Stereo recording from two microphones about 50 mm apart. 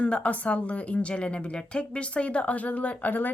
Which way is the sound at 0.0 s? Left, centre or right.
Left.